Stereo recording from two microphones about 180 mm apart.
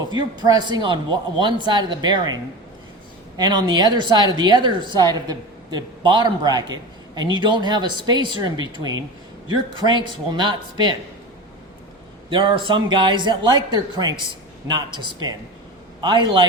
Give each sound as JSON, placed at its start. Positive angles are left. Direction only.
{"t": 0.1, "sound": "a woman's voice", "side_deg": -25}
{"t": 12.3, "sound": "a woman's voice", "side_deg": -25}